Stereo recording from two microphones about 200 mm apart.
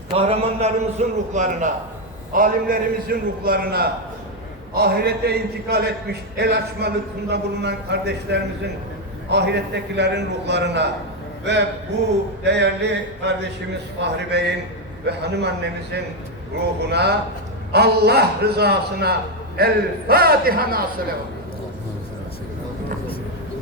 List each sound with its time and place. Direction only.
0.2 s a man's voice: 30° right (ahead or behind); by 15.5 s 55° right (ahead or behind)
16.8 s a man's voice: 55° right (ahead or behind)